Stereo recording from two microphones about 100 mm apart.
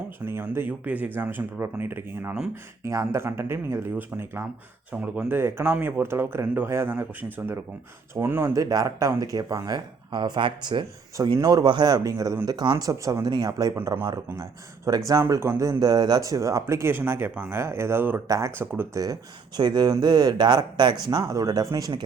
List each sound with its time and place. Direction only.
0.3 s speech: 25° right (ahead or behind)
4.9 s speech: 15° right (ahead or behind)
5.3 s speech: 25° right (ahead or behind)
8.5 s speech: 35° right (ahead or behind)
14.8 s speech: 35° right (ahead or behind); by 18.9 s 20° right (ahead or behind)
19.5 s speech: 45° right (ahead or behind)